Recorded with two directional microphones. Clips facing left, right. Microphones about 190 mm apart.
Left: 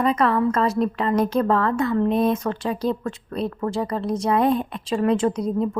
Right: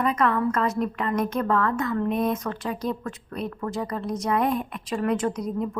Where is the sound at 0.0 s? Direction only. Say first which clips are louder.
Left 3 dB; 30° left (ahead or behind).